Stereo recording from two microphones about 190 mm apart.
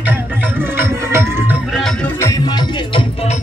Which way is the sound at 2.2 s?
20° left (ahead or behind).